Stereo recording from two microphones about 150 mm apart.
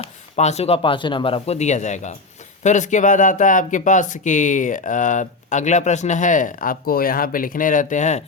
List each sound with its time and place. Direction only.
0.0 s speech: 45° left (ahead or behind)